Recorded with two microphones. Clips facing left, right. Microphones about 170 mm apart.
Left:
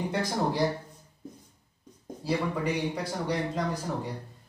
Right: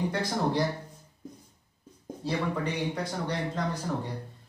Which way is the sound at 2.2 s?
10° left (ahead or behind).